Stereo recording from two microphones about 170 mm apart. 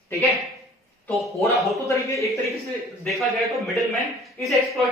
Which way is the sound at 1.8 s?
15° left (ahead or behind).